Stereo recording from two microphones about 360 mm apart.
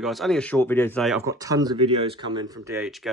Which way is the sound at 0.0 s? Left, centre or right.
Centre.